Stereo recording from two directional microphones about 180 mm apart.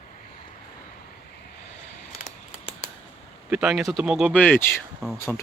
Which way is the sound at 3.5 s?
5° right (ahead or behind).